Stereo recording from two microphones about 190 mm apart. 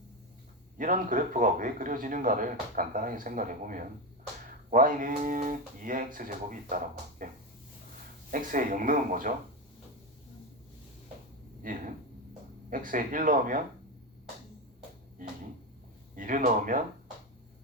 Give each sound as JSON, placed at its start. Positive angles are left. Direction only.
{"t": 0.8, "sound": "speech", "side_deg": -45}
{"t": 7.2, "sound": "a sound", "side_deg": -45}
{"t": 8.3, "sound": "speech", "side_deg": -45}
{"t": 11.6, "sound": "speech", "side_deg": -45}
{"t": 16.1, "sound": "speech", "side_deg": -45}